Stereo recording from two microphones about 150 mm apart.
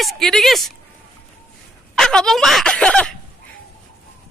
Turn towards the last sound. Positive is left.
turn(degrees=5)  # may be behind; listen again after turning